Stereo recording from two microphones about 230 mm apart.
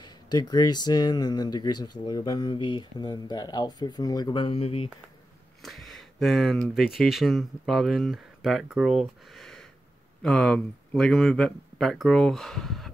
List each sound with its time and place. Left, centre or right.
0.0 s speech: centre
5.6 s speech: centre